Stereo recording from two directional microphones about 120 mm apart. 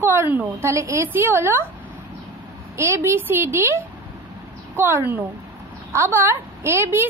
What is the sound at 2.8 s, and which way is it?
Speech, 25° right (ahead or behind).